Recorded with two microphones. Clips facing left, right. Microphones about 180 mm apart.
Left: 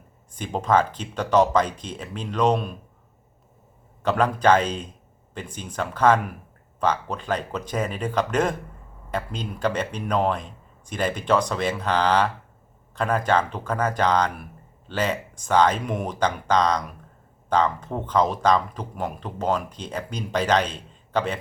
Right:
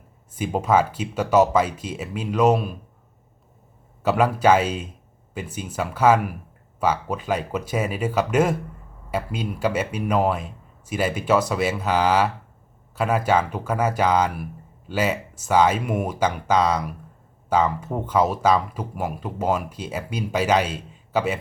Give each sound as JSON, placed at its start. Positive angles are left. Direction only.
{"t": 0.3, "sound": "speech", "side_deg": -5}
{"t": 4.0, "sound": "speech", "side_deg": -10}